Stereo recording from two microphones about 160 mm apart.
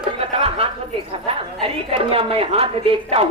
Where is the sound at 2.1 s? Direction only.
35° right (ahead or behind).